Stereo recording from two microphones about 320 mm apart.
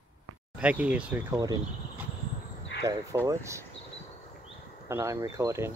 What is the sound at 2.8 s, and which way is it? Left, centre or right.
Speech, centre.